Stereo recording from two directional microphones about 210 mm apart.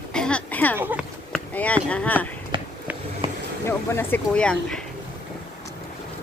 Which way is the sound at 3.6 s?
10° left (ahead or behind).